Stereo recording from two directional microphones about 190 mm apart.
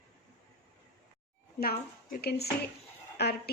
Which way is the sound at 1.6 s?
50° left (ahead or behind).